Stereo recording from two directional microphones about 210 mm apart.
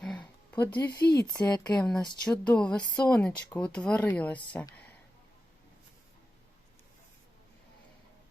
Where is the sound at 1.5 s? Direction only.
20° left (ahead or behind).